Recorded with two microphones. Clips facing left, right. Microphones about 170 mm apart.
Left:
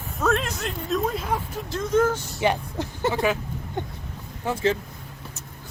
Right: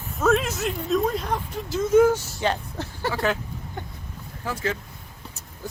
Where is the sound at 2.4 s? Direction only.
15° left (ahead or behind).